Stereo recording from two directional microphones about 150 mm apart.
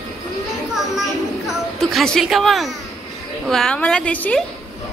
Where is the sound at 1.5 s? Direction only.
Centre (ahead or behind).